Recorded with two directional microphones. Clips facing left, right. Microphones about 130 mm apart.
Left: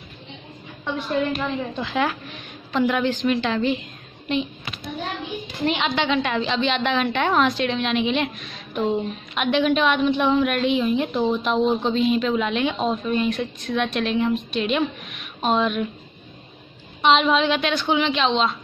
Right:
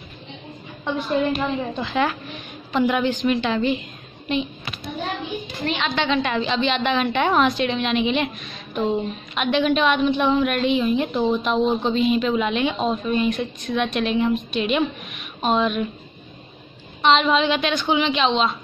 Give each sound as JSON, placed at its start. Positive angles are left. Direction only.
{"t": 1.3, "sound": "a woman's voice", "side_deg": -15}
{"t": 1.7, "sound": "a woman's voice", "side_deg": 0}
{"t": 5.7, "sound": "a woman's voice", "side_deg": 15}
{"t": 5.9, "sound": "a woman's voice", "side_deg": 5}
{"t": 17.0, "sound": "a woman's voice", "side_deg": 5}